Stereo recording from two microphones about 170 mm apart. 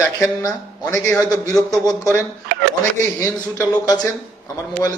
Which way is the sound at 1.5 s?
Centre (ahead or behind).